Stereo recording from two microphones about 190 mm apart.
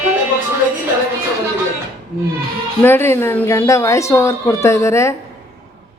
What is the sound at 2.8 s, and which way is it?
Speech, 10° left (ahead or behind).